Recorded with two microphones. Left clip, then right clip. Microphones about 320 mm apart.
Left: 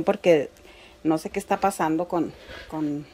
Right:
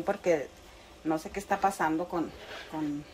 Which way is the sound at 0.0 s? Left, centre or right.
Left.